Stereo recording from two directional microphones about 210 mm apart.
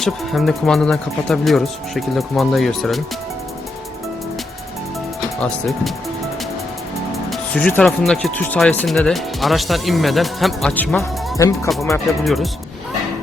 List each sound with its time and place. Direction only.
0.0 s speech: centre (ahead or behind)
5.4 s speech: centre (ahead or behind)
7.3 s speech: 5° left (ahead or behind)
11.3 s speech: 15° left (ahead or behind)
12.2 s speech: centre (ahead or behind)